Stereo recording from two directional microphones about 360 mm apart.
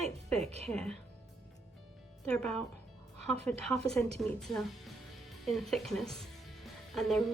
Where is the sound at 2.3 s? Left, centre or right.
Centre.